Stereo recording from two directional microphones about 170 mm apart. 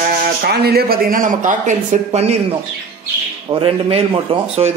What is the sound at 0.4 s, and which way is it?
Speech, 65° right (ahead or behind).